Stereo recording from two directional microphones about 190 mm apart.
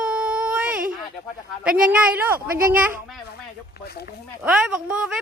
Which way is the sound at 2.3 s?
50° right (ahead or behind).